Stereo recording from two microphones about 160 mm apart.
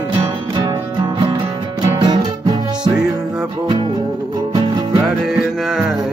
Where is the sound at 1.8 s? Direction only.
25° right (ahead or behind).